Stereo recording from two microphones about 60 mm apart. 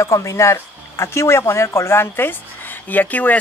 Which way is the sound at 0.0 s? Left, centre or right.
Left.